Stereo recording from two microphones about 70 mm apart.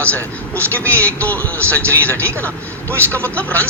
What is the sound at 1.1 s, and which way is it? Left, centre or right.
Speech, left.